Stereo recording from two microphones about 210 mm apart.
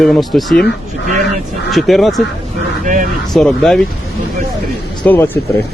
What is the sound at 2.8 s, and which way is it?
Speech, 35° right (ahead or behind).